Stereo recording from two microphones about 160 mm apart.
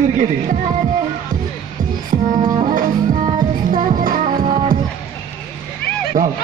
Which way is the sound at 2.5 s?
50° right (ahead or behind).